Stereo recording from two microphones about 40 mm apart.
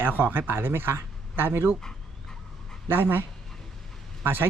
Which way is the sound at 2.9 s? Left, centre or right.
Right.